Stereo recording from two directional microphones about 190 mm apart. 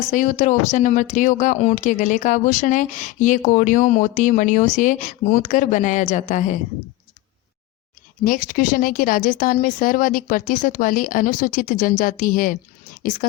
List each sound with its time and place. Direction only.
0.1 s speech: 40° left (ahead or behind)
8.2 s speech: 45° left (ahead or behind)